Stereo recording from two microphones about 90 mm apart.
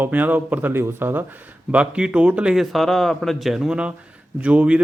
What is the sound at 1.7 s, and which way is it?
Speech, 10° right (ahead or behind).